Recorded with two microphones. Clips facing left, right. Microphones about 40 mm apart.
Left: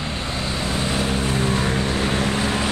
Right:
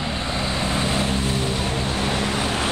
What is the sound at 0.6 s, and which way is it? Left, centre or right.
Vehicle, right.